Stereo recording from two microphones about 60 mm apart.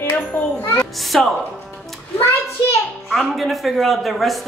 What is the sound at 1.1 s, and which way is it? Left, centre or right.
Speech, centre.